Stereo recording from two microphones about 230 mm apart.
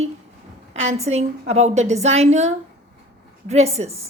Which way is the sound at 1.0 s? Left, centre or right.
Right.